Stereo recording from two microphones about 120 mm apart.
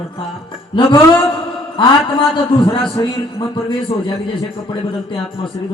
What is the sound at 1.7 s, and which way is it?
A man's voice, 45° left (ahead or behind).